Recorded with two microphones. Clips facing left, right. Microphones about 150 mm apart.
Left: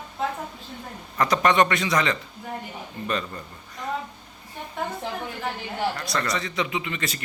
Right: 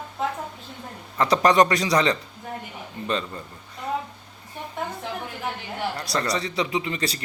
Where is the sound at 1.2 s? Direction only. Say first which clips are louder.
Right 2 dB; 35° right (ahead or behind).